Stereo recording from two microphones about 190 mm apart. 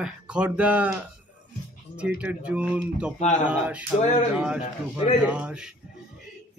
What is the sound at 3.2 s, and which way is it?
Speech, 40° left (ahead or behind).